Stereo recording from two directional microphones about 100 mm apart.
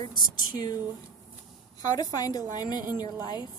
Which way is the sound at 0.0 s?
45° left (ahead or behind).